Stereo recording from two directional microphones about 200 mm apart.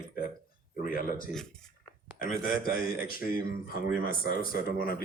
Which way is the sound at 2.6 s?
45° left (ahead or behind).